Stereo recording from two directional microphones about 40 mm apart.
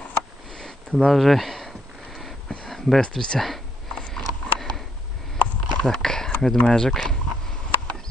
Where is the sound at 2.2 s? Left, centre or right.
Centre.